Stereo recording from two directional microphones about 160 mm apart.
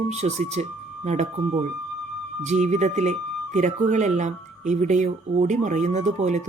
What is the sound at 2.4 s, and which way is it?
Speech, 45° right (ahead or behind).